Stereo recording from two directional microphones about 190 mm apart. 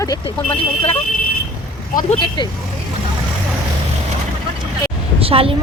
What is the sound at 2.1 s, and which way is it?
Speech, 25° left (ahead or behind).